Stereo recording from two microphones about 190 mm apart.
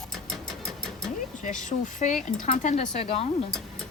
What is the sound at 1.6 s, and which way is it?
Speech, 40° left (ahead or behind).